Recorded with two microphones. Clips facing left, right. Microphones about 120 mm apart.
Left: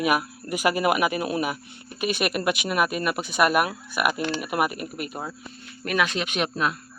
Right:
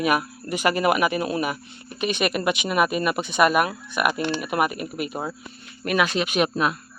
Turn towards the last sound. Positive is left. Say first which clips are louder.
# right 4 dB
turn(degrees=-10)  # may be behind; listen again after turning